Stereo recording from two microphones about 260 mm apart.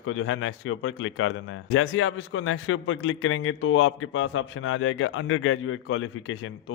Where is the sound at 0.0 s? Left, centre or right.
Left.